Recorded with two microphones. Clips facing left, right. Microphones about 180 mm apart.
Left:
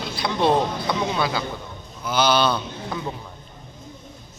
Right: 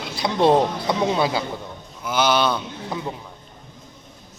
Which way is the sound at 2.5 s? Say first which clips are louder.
Even; 10° right (ahead or behind).